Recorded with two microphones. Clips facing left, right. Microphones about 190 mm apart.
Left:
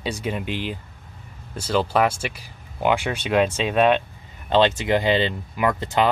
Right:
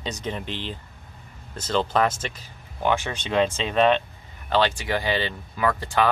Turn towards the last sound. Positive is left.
turn(degrees=20)  # may be behind; listen again after turning